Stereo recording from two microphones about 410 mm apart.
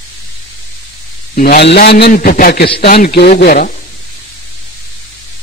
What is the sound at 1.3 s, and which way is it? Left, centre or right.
A man's voice, left.